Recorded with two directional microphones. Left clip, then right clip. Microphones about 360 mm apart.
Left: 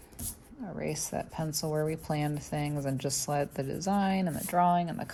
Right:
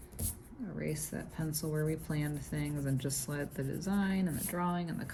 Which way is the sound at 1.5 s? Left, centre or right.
Left.